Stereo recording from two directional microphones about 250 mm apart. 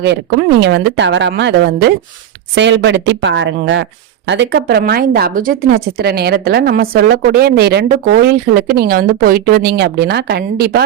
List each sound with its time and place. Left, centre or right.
0.0 s speech: right